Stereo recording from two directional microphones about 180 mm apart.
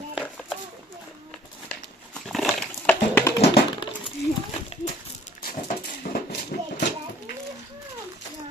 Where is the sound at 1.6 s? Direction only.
5° left (ahead or behind).